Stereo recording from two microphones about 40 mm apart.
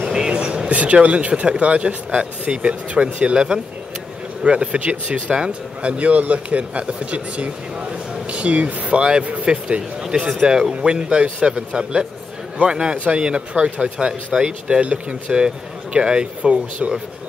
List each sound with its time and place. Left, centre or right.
0.1 s vehicle: right
0.7 s speech: right
4.5 s speech: right
9.5 s speech: right